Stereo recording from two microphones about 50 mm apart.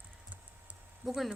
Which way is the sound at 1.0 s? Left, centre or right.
Centre.